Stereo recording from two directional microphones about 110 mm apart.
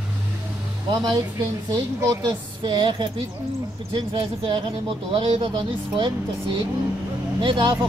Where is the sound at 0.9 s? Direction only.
35° right (ahead or behind).